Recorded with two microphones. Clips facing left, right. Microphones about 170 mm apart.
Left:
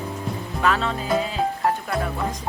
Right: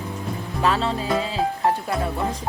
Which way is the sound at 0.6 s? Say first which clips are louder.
Right 1 dB; 30° right (ahead or behind).